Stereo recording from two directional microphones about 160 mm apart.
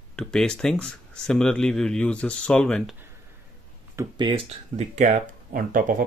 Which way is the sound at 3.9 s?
20° right (ahead or behind).